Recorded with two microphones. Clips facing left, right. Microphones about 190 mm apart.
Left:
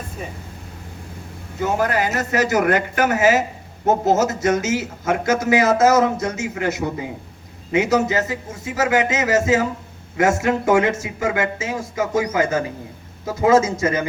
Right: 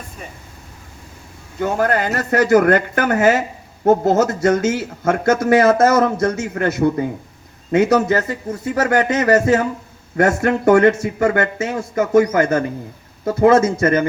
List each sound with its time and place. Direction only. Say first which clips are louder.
1.6 s speech: right 2 dB; 55° right (ahead or behind)